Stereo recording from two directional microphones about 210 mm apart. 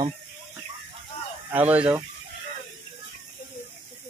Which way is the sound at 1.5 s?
5° right (ahead or behind).